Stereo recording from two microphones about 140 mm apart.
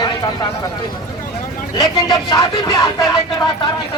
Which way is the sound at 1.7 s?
30° left (ahead or behind).